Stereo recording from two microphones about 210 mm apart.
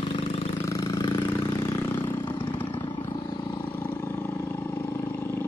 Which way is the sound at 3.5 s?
10° left (ahead or behind).